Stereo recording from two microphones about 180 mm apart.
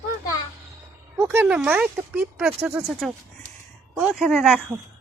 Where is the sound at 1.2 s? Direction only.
10° right (ahead or behind).